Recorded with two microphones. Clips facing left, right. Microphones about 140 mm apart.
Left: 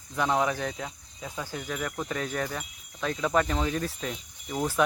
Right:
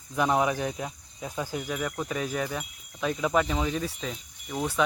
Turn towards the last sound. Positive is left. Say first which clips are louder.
# left 1 dB
turn(degrees=0)  # may be behind; listen again after turning